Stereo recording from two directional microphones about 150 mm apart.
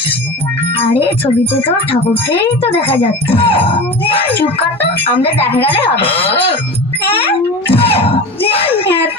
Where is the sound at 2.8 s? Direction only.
40° left (ahead or behind).